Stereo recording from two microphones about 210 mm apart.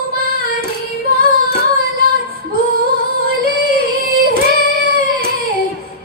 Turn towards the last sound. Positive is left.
turn(degrees=-45)  # may be behind; listen again after turning